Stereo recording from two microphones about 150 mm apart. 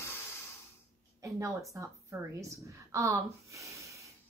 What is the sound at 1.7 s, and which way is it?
A woman's voice, 20° right (ahead or behind).